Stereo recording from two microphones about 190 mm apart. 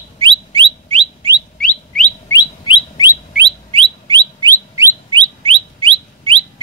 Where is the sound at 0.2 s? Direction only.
25° right (ahead or behind).